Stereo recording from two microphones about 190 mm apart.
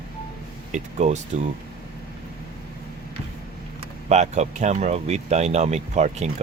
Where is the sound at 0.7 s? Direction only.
35° right (ahead or behind).